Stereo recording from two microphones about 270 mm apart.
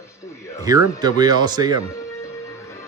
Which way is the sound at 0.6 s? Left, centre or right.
Centre.